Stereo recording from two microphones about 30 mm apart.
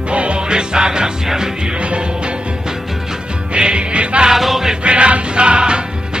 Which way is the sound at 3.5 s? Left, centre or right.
Right.